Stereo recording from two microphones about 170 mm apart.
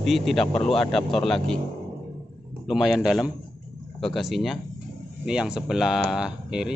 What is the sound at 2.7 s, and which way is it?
A man's voice, centre (ahead or behind).